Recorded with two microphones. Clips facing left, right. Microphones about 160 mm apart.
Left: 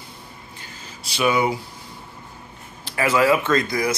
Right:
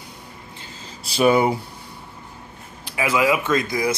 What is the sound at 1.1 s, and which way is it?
Speech, 45° right (ahead or behind).